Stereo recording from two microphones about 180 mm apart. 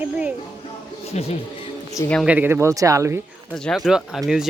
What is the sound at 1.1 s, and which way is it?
Speech, 35° left (ahead or behind).